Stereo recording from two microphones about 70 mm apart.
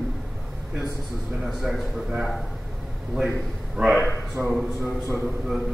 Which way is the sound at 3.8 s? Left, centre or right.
Centre.